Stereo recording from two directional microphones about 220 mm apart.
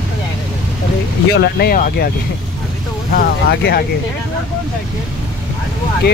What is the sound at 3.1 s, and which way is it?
Speech, 45° left (ahead or behind).